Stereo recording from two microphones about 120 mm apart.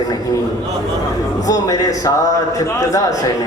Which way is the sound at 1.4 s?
30° left (ahead or behind).